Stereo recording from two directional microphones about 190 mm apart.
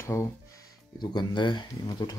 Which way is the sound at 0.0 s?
15° left (ahead or behind).